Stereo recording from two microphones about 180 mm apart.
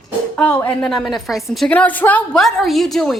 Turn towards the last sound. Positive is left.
turn(degrees=0)  # may be behind; listen again after turning